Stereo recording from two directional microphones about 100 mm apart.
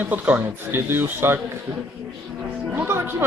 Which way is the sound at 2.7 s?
20° right (ahead or behind).